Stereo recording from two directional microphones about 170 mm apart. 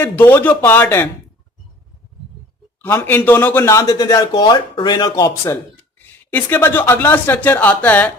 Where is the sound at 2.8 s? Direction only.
10° left (ahead or behind).